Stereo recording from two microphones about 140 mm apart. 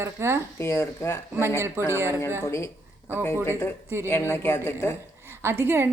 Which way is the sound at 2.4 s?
20° left (ahead or behind).